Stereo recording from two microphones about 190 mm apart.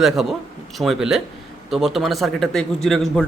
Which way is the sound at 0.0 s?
Centre (ahead or behind).